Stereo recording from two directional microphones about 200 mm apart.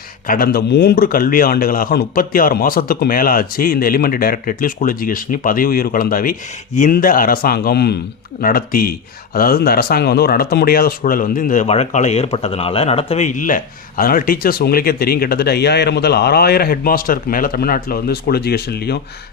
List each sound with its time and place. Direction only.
0.3 s speech: 50° left (ahead or behind)